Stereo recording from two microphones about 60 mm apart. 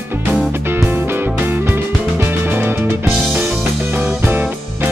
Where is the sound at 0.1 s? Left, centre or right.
Right.